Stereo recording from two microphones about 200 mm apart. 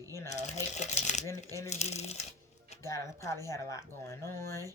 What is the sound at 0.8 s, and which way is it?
Speech, 35° left (ahead or behind).